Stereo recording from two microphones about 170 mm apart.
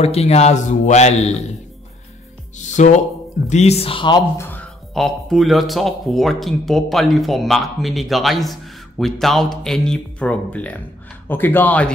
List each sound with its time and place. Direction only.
0.0 s a man's voice: 40° left (ahead or behind)
2.5 s a man's voice: 45° left (ahead or behind); by 4.2 s 30° left (ahead or behind)
4.9 s a man's voice: centre (ahead or behind)